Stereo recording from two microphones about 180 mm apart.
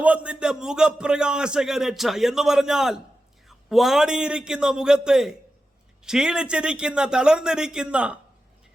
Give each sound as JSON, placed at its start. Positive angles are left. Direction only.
{"t": 0.0, "sound": "a man's voice", "side_deg": -5}